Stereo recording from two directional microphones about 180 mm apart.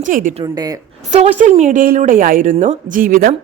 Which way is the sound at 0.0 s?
45° right (ahead or behind).